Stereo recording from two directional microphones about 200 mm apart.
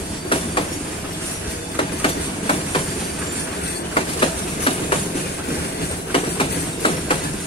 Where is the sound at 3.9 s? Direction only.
25° left (ahead or behind).